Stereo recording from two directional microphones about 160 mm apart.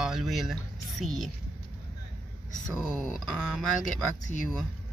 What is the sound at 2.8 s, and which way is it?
Speech, centre (ahead or behind).